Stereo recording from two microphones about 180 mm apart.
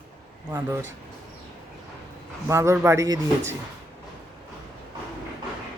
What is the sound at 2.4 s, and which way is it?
Speech, 15° right (ahead or behind).